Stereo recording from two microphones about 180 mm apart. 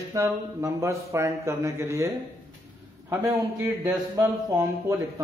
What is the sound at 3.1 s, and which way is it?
Speech, 15° right (ahead or behind).